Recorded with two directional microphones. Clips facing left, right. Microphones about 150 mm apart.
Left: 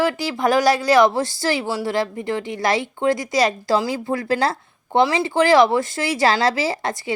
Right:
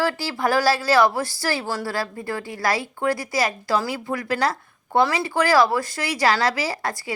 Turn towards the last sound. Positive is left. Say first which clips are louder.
# left 4 dB
turn(degrees=20)  # may be behind; listen again after turning